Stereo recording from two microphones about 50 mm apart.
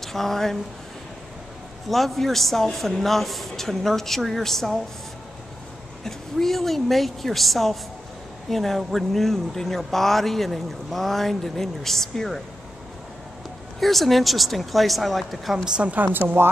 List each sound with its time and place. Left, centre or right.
0.0 s speech: centre
1.9 s speech: centre
6.0 s speech: centre
13.7 s speech: centre
15.5 s a woman's voice: centre
15.9 s a woman's voice: right